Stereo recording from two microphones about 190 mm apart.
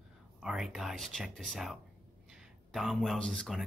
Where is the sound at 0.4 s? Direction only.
Centre (ahead or behind).